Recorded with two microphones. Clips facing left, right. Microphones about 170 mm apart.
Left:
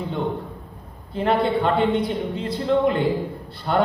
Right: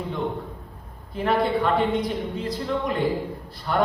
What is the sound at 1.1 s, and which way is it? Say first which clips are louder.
A man's voice: left 2 dB; 30° left (ahead or behind).